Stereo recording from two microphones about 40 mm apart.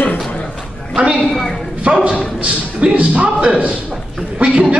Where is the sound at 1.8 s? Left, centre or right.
Right.